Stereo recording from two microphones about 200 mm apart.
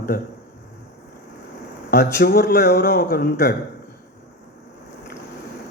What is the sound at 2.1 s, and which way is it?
A man's voice, 55° left (ahead or behind).